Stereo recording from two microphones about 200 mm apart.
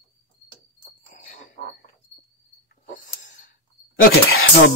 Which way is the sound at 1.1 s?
40° left (ahead or behind).